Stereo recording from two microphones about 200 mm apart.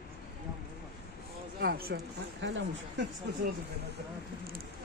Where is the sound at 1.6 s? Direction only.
50° right (ahead or behind).